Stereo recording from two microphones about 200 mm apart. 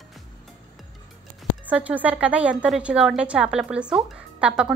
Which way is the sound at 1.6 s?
5° right (ahead or behind).